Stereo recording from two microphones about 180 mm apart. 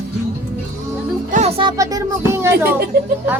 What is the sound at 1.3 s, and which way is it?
Music, 35° right (ahead or behind).